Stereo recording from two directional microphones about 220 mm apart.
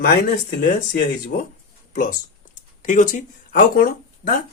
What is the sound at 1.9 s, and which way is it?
Speech, 40° left (ahead or behind).